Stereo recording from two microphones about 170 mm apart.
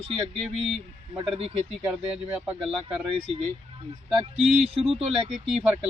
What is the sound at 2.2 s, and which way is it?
Speech, 10° right (ahead or behind).